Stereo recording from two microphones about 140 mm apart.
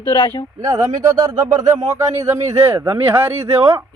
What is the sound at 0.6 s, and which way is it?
Speech, 25° right (ahead or behind).